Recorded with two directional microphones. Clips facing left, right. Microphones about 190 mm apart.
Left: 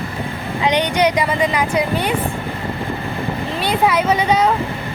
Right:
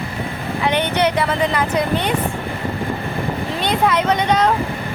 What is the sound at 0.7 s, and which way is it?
A woman's voice, 15° left (ahead or behind).